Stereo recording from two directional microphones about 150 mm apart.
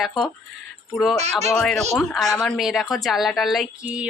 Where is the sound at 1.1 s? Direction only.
45° right (ahead or behind).